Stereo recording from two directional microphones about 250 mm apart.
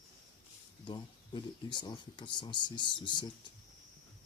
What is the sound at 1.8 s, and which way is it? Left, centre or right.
Speech, centre.